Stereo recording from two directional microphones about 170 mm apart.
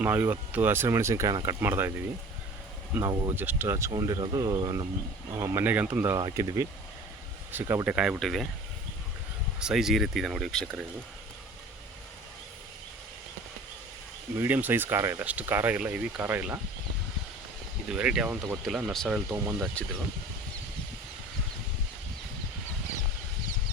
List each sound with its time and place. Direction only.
0.0 s speech: 10° right (ahead or behind)
2.9 s speech: 15° right (ahead or behind)
5.4 s speech: 10° right (ahead or behind)
9.6 s speech: 5° right (ahead or behind)
14.3 s speech: 10° right (ahead or behind)
17.9 s speech: 5° right (ahead or behind)